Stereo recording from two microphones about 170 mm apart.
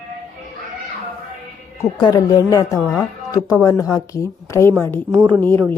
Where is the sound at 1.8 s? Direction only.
25° left (ahead or behind).